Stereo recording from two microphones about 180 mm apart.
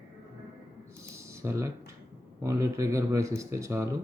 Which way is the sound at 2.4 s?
15° right (ahead or behind).